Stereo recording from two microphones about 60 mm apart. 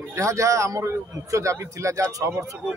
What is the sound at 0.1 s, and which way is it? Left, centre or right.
Speech, right.